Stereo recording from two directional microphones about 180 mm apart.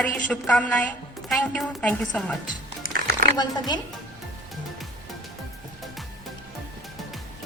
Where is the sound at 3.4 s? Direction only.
25° left (ahead or behind).